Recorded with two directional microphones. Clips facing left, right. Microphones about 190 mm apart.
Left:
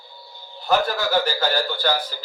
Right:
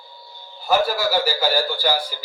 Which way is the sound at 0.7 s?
5° right (ahead or behind).